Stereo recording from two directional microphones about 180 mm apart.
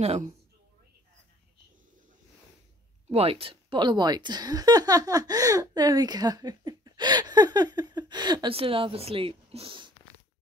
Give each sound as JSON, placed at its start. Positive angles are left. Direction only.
{"t": 0.0, "sound": "a woman's voice", "side_deg": -40}
{"t": 3.1, "sound": "speech", "side_deg": -35}